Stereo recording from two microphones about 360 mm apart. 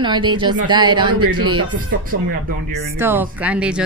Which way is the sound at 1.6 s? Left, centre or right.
Right.